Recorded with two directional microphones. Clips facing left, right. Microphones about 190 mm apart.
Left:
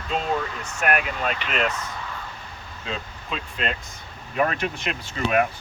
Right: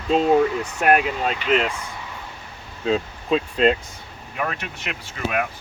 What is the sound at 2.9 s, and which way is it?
Speech, 35° right (ahead or behind).